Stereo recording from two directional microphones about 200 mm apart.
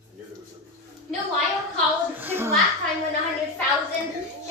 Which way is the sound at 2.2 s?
10° right (ahead or behind).